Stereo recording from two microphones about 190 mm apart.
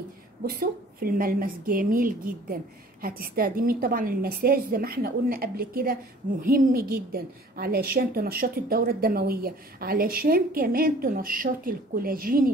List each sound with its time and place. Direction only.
0.4 s a woman's voice: 50° right (ahead or behind)